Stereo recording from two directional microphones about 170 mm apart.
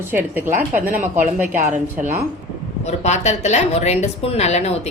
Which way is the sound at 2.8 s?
40° left (ahead or behind).